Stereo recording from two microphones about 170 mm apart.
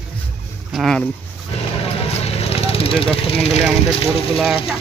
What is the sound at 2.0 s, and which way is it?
Vehicle, 35° left (ahead or behind).